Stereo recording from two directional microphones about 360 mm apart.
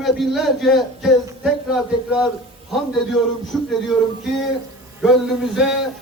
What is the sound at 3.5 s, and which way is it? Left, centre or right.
Speech, centre.